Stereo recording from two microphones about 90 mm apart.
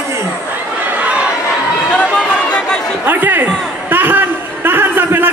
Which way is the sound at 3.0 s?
20° right (ahead or behind).